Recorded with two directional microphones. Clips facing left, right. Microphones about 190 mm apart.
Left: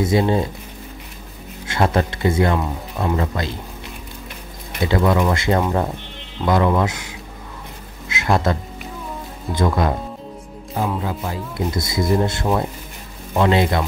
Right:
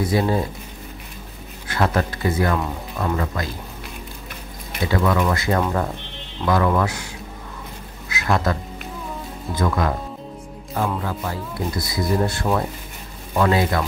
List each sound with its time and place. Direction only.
0.0 s speech: 25° left (ahead or behind)
1.7 s speech: 25° left (ahead or behind)
4.8 s speech: 25° left (ahead or behind)
8.1 s music: 25° left (ahead or behind)
9.6 s speech: 25° left (ahead or behind)
11.0 s speech: 20° left (ahead or behind)